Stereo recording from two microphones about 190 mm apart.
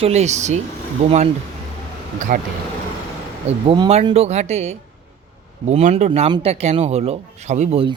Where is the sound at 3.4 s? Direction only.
30° right (ahead or behind).